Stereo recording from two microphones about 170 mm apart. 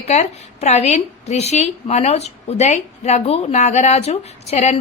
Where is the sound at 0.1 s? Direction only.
40° left (ahead or behind).